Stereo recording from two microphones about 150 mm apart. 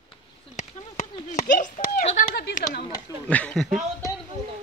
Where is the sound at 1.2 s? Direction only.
55° left (ahead or behind); by 2.8 s 90° left.